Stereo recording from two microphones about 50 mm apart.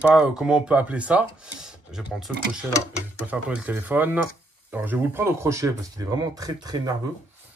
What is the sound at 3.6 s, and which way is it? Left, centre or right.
Speech, right.